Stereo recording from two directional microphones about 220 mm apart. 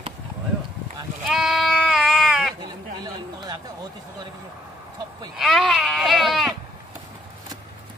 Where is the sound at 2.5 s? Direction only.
20° right (ahead or behind).